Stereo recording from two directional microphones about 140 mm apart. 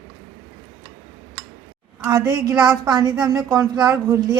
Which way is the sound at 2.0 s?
25° right (ahead or behind).